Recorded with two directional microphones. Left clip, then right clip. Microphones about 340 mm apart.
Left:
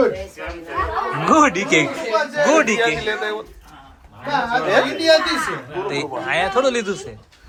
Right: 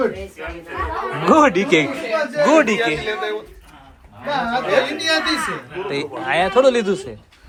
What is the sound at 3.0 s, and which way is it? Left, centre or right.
Speech, left.